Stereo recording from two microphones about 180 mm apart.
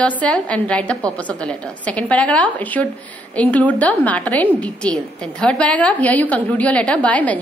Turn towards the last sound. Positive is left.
turn(degrees=10)  # may be behind; listen again after turning